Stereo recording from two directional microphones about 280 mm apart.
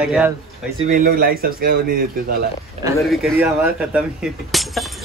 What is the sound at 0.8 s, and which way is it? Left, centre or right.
Speech, right.